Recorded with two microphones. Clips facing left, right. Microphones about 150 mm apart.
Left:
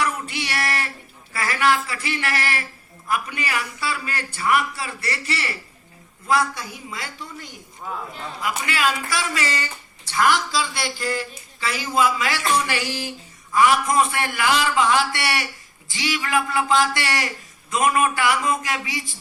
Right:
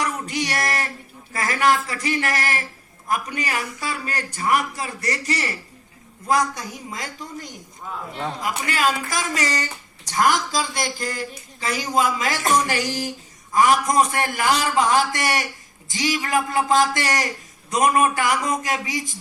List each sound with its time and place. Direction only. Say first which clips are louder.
0.0 s a sound: right 1 dB; 40° right (ahead or behind)
1.3 s a man's voice: right 1 dB; 40° right (ahead or behind)
7.9 s a man's voice: left 2 dB; 5° left (ahead or behind)
8.4 s a man's voice: left 1 dB; 40° right (ahead or behind)